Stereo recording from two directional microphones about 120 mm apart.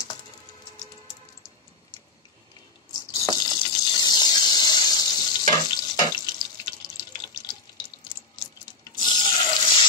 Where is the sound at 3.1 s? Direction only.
40° left (ahead or behind).